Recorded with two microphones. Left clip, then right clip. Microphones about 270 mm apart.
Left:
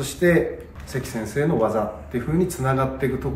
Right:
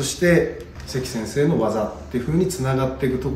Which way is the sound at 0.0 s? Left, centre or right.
Centre.